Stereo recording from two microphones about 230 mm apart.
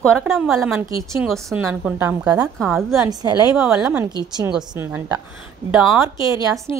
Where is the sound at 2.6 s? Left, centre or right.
Centre.